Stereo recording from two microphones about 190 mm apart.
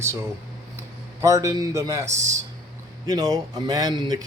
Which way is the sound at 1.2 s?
20° right (ahead or behind).